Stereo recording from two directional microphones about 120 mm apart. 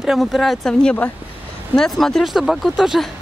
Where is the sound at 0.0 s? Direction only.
Centre (ahead or behind).